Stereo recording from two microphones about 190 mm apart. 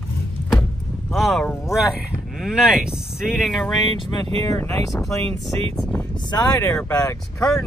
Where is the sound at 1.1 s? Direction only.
Centre (ahead or behind).